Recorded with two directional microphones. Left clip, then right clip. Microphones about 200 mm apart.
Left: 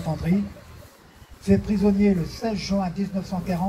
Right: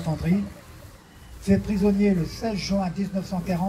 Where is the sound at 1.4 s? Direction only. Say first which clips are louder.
Left 1 dB; 60° right (ahead or behind).